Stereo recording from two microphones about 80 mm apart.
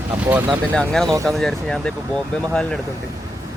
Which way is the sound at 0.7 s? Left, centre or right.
Centre.